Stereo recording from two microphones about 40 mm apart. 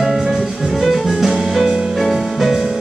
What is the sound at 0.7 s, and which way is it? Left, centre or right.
Music, centre.